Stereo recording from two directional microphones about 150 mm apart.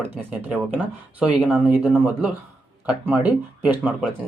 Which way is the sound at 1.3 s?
10° right (ahead or behind).